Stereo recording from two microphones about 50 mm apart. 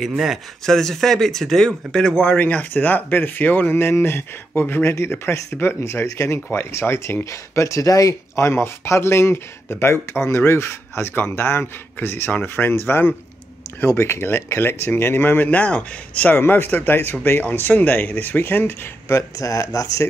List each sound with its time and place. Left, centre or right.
0.7 s speech: centre
2.2 s speech: left
6.0 s speech: left
7.2 s speech: left
12.3 s speech: left
13.8 s speech: left
16.3 s speech: left
19.1 s speech: left